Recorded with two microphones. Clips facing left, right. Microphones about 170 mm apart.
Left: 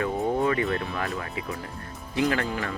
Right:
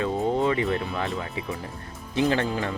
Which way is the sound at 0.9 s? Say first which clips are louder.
Right 1 dB; 20° right (ahead or behind).